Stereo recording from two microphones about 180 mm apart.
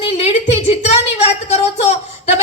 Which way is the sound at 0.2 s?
35° left (ahead or behind).